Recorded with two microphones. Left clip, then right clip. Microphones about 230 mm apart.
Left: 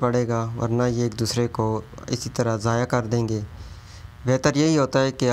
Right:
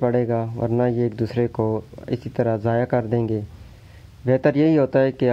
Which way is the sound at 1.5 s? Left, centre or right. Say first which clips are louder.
Right 2 dB; centre.